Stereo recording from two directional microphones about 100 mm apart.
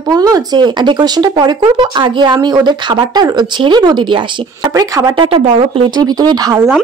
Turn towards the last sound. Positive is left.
turn(degrees=-40)  # may be behind; listen again after turning